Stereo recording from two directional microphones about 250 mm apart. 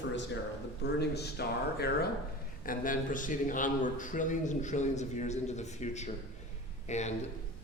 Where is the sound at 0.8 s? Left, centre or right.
Left.